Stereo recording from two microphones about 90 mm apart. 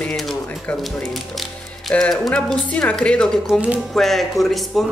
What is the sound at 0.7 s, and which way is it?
A woman's voice, centre (ahead or behind).